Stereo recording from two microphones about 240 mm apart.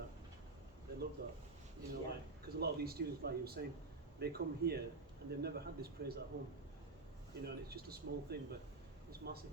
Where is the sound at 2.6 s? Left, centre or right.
Right.